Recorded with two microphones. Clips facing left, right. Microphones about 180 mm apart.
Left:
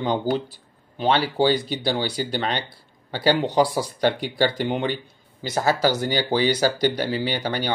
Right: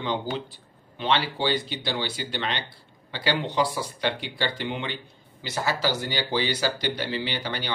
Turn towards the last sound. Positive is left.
turn(degrees=45)  # may be behind; listen again after turning